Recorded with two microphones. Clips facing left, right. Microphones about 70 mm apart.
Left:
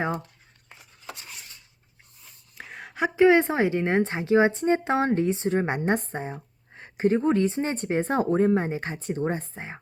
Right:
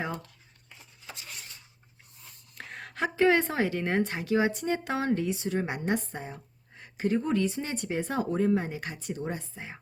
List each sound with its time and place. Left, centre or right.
2.2 s speech: centre; by 9.8 s left